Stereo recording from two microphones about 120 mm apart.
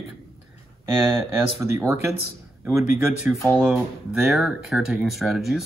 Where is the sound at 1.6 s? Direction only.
25° right (ahead or behind).